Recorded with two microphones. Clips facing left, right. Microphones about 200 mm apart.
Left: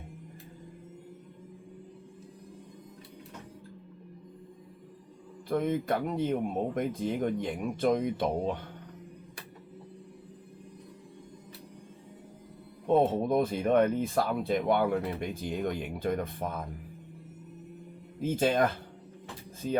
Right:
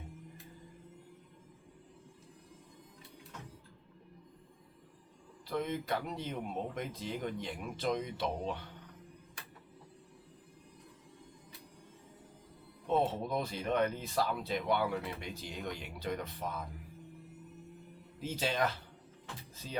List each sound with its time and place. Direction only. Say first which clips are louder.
5.5 s speech: left 7 dB; 50° left (ahead or behind)
12.9 s speech: left 7 dB; 50° left (ahead or behind)
18.2 s speech: left 8 dB; 50° left (ahead or behind)